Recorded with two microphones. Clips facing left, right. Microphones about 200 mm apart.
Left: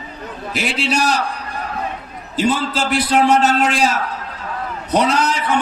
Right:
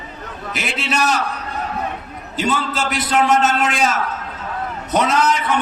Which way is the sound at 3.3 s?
Centre (ahead or behind).